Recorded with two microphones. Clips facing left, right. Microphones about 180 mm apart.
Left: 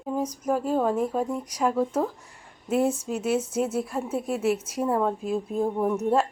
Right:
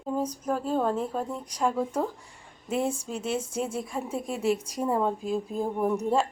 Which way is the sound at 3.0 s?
5° left (ahead or behind).